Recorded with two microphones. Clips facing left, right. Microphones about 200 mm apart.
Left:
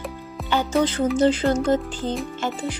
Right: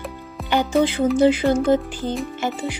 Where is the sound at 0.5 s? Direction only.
15° right (ahead or behind).